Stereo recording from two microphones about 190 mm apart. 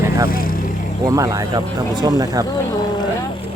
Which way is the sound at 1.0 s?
20° right (ahead or behind).